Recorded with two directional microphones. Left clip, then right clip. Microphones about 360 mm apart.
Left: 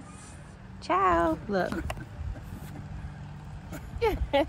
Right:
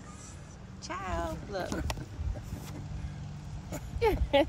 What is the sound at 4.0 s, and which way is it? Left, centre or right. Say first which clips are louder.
Speech: even; centre.